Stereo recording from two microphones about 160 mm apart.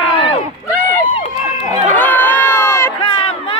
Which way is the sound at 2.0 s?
10° left (ahead or behind).